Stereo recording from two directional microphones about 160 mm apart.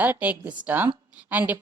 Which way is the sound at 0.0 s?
10° right (ahead or behind).